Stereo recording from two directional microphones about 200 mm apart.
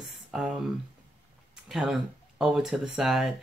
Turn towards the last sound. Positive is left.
turn(degrees=0)  # may be behind; listen again after turning